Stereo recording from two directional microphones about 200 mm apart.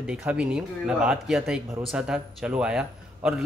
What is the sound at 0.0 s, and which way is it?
A man's voice, 5° right (ahead or behind).